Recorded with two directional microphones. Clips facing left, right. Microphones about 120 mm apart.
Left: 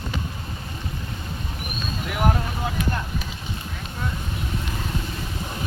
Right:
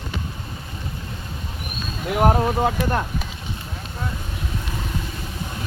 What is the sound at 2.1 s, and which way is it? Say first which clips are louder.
Speech: right 6 dB; 45° right (ahead or behind).